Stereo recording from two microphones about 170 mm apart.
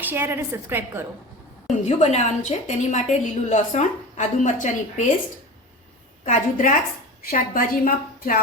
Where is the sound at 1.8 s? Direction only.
40° left (ahead or behind).